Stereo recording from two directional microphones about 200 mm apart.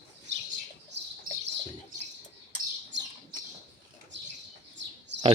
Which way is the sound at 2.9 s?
65° right (ahead or behind).